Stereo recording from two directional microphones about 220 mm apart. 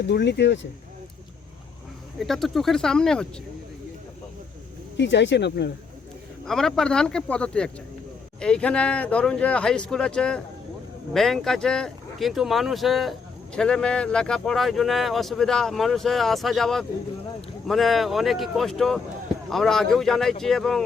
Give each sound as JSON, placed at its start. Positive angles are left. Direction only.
{"t": 0.0, "sound": "speech", "side_deg": 50}
{"t": 2.1, "sound": "speech", "side_deg": 0}
{"t": 4.9, "sound": "speech", "side_deg": 55}
{"t": 6.4, "sound": "speech", "side_deg": 0}